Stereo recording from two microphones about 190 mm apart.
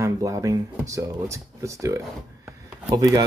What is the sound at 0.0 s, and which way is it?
Speech, 20° right (ahead or behind).